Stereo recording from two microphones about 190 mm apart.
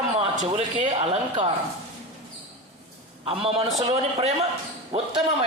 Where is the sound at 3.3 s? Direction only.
30° right (ahead or behind).